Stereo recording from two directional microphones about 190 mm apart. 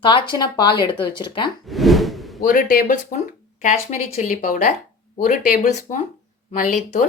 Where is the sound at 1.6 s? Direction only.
Centre (ahead or behind).